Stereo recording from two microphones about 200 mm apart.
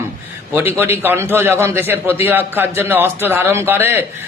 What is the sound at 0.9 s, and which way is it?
A man's voice, 10° right (ahead or behind).